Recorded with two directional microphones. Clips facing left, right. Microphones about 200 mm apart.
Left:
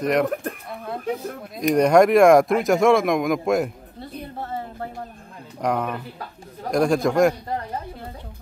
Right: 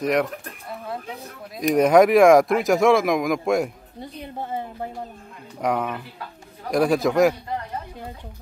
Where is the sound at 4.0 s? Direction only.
15° right (ahead or behind).